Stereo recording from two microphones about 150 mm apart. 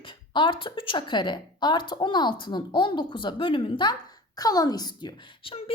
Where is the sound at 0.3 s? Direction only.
35° left (ahead or behind).